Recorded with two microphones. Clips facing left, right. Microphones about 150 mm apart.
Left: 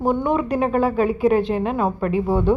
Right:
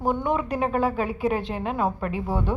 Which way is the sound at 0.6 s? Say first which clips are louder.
Left 4 dB; 55° left (ahead or behind).